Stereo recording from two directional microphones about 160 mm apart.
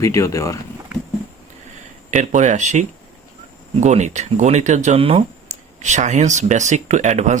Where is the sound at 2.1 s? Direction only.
50° right (ahead or behind).